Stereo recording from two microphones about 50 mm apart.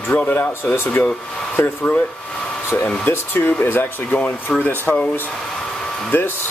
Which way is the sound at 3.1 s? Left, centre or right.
Left.